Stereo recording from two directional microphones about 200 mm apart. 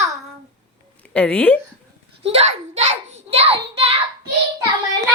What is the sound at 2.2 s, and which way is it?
A child's voice, 30° right (ahead or behind).